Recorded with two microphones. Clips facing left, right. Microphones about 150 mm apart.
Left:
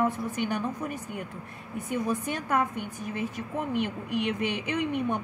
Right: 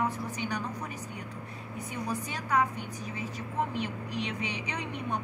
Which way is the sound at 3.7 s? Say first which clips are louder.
Left 5 dB; 55° left (ahead or behind).